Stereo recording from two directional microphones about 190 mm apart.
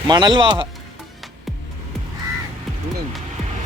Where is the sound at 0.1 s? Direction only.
25° right (ahead or behind).